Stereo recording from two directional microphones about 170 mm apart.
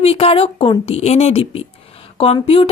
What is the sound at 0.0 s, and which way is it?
Speech, 35° left (ahead or behind).